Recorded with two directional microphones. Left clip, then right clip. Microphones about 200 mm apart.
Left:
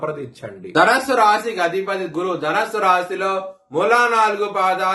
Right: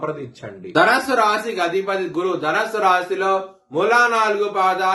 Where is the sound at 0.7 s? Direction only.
15° left (ahead or behind).